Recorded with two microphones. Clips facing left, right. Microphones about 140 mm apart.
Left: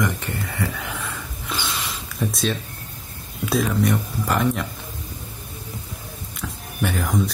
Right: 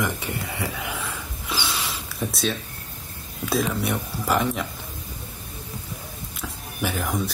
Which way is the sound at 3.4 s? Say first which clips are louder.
Left 3 dB; centre (ahead or behind).